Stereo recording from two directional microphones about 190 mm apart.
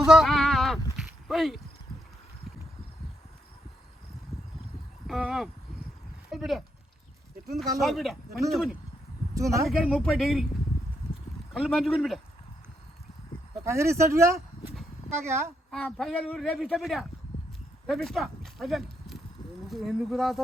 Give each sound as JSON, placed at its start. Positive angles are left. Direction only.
{"t": 0.0, "sound": "sheep", "side_deg": 0}
{"t": 5.0, "sound": "speech", "side_deg": 0}
{"t": 9.3, "sound": "speech", "side_deg": -15}
{"t": 9.6, "sound": "speech", "side_deg": 0}
{"t": 11.5, "sound": "speech", "side_deg": 0}
{"t": 13.7, "sound": "speech", "side_deg": -15}
{"t": 15.7, "sound": "speech", "side_deg": 5}